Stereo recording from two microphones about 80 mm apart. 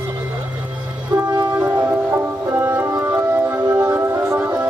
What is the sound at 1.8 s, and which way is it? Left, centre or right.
Music, right.